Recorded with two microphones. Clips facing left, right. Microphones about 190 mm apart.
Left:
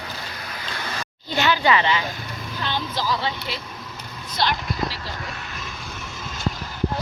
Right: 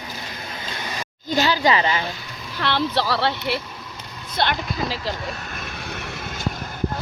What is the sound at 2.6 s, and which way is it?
Speech, 70° right (ahead or behind).